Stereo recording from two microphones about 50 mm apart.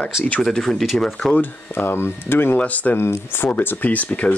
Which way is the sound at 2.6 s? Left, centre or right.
Left.